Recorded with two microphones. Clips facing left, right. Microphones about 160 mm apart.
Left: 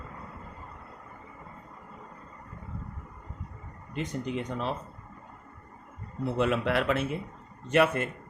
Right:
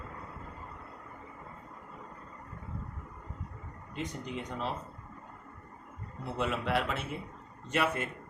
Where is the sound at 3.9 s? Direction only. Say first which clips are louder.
Left 6 dB; 65° left (ahead or behind).